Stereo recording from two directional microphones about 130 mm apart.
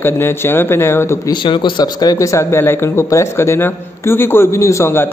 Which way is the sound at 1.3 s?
35° left (ahead or behind).